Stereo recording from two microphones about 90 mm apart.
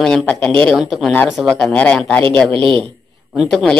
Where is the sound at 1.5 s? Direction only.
15° left (ahead or behind).